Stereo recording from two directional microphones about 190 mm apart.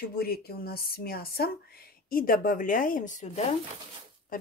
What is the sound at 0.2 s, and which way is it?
Speech, 55° left (ahead or behind).